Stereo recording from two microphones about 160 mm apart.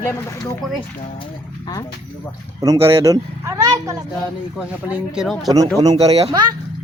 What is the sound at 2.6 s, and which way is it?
Speech, 20° right (ahead or behind).